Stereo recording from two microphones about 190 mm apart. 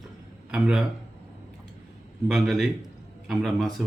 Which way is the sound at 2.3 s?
Centre (ahead or behind).